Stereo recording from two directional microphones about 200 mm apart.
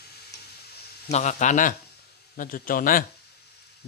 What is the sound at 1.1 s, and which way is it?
Speech, 35° left (ahead or behind).